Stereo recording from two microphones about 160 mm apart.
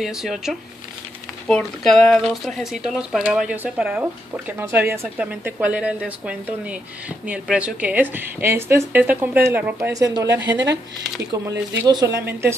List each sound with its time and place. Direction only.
0.0 s speech: centre (ahead or behind)
11.9 s speech: 20° right (ahead or behind)